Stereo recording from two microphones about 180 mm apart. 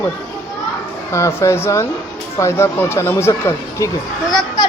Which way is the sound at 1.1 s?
15° left (ahead or behind).